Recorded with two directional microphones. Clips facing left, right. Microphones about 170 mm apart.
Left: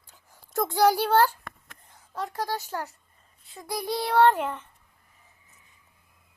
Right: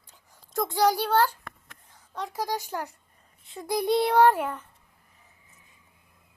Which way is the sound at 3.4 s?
25° right (ahead or behind).